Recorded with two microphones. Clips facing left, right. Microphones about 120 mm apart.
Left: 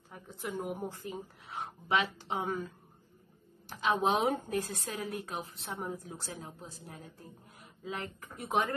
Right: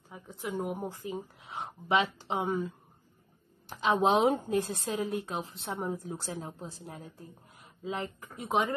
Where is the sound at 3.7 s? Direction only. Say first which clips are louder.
Right 3 dB; 25° right (ahead or behind).